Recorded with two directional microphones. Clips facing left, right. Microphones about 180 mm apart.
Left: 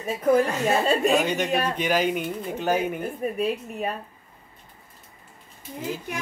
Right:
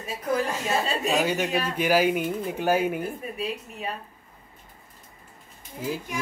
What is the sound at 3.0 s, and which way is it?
Speech, 50° left (ahead or behind).